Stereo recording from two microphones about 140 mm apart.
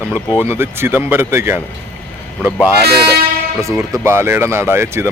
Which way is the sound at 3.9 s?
20° right (ahead or behind).